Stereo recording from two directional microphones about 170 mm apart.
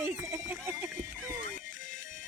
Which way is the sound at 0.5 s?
10° right (ahead or behind).